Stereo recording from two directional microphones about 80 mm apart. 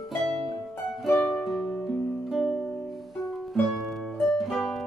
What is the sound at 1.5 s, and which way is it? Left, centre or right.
Music, centre.